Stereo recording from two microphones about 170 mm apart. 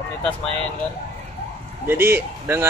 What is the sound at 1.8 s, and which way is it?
Speech, 10° right (ahead or behind).